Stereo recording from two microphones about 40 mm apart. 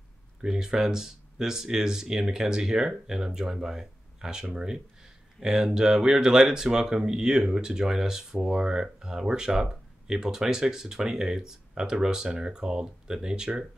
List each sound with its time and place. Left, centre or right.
0.4 s speech: centre